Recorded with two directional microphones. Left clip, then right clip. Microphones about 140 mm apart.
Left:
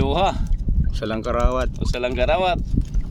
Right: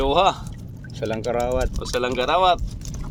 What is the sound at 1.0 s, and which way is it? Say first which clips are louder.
Speech: even; 65° left (ahead or behind).